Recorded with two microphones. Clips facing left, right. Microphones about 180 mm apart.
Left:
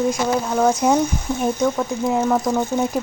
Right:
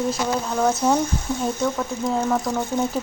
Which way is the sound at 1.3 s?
15° left (ahead or behind).